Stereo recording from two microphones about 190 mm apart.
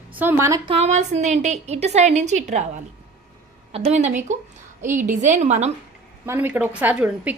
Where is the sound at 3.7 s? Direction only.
35° right (ahead or behind).